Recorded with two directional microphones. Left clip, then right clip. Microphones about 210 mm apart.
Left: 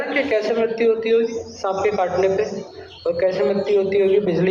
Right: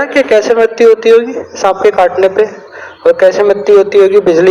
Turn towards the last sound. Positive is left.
turn(degrees=-55)  # may be behind; listen again after turning